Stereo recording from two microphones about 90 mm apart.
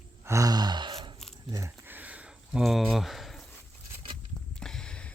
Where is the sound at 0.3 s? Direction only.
35° right (ahead or behind).